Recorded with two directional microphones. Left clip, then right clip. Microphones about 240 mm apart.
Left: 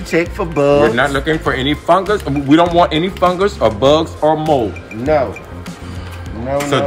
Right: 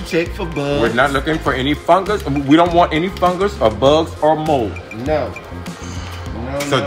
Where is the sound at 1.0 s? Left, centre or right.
Centre.